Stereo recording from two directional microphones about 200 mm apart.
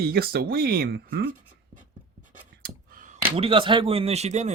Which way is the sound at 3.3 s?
30° right (ahead or behind).